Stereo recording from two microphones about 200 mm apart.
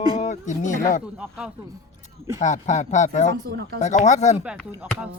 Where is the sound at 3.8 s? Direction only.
35° left (ahead or behind).